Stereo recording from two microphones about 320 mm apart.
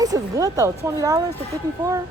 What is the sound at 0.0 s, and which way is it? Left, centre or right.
Speech, centre.